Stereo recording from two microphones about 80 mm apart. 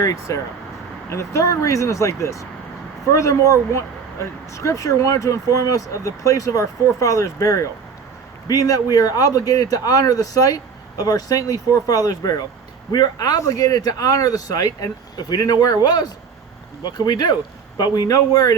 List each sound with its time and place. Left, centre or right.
0.0 s speech: left